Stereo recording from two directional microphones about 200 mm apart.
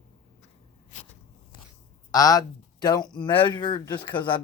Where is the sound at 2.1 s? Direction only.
20° left (ahead or behind).